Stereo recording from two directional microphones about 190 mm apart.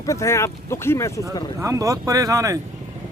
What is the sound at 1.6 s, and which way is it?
Speech, 15° right (ahead or behind).